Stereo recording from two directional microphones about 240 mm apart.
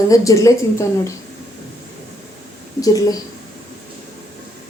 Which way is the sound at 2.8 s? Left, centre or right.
Centre.